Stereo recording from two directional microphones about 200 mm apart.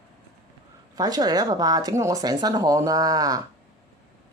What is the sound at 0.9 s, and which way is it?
Speech, 20° right (ahead or behind).